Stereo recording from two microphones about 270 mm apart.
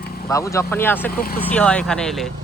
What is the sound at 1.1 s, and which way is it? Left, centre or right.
Speech, left.